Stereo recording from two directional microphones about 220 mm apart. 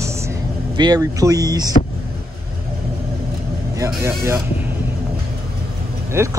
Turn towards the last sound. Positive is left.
turn(degrees=-10)  # may be behind; listen again after turning